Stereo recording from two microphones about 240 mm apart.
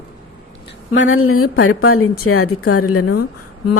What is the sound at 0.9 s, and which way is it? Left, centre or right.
A woman's voice, left.